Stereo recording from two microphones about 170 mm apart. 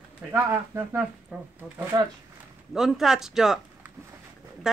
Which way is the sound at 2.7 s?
Centre (ahead or behind).